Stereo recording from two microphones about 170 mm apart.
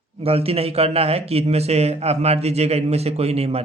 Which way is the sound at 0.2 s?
35° right (ahead or behind).